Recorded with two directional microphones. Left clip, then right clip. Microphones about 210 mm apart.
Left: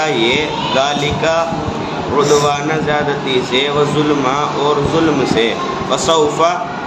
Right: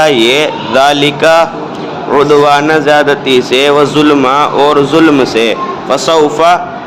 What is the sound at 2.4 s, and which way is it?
A man's voice, 50° right (ahead or behind).